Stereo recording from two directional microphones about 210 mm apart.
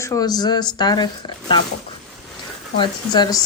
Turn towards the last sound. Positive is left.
turn(degrees=20)  # may be behind; listen again after turning